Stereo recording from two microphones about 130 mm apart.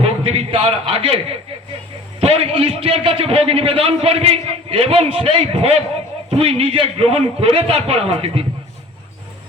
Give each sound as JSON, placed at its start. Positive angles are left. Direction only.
{"t": 0.0, "sound": "a man's voice", "side_deg": -50}